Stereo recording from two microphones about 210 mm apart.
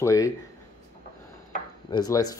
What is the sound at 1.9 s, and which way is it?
Speech, 15° left (ahead or behind).